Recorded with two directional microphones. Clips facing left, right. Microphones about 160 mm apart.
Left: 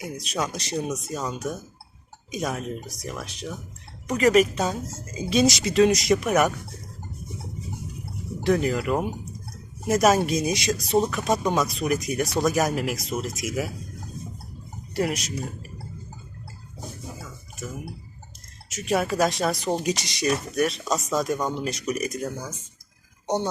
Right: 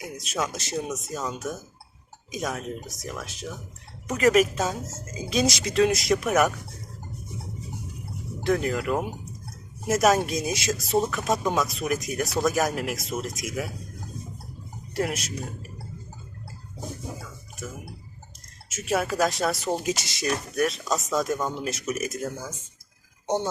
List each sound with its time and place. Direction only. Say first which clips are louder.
0.0 s speech: left 1 dB; centre (ahead or behind)
8.4 s speech: left 2 dB; centre (ahead or behind)
14.9 s speech: left 2 dB; centre (ahead or behind)
18.7 s speech: left 2 dB; centre (ahead or behind)